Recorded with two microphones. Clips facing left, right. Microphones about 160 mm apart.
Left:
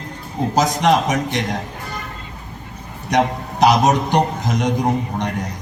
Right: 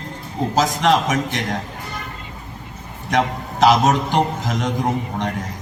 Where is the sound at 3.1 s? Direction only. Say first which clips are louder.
Left 2 dB; 15° left (ahead or behind).